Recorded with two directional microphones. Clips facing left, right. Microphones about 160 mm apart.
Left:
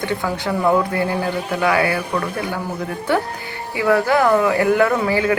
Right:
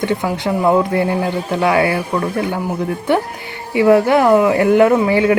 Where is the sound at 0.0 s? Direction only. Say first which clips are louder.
Right 4 dB; 20° right (ahead or behind).